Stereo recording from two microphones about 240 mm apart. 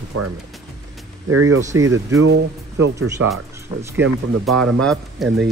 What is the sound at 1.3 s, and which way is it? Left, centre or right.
Speech, right.